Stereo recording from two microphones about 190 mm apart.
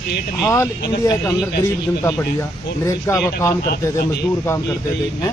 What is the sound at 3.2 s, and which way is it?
Speech, 15° left (ahead or behind).